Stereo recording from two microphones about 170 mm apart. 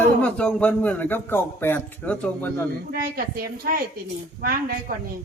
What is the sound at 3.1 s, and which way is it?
A woman's voice, 60° right (ahead or behind).